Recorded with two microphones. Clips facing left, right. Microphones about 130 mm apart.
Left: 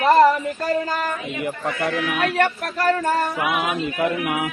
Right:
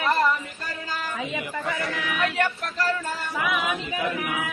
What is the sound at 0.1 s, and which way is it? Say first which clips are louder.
Chatter: left 10 dB; 50° left (ahead or behind).